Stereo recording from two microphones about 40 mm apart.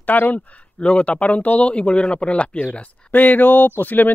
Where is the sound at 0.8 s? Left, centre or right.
Left.